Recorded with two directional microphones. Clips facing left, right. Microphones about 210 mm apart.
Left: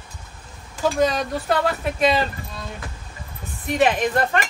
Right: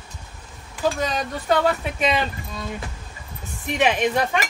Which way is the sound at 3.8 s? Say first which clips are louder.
Left 1 dB; centre (ahead or behind).